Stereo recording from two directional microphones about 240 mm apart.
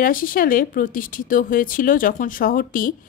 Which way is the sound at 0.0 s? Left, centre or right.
Left.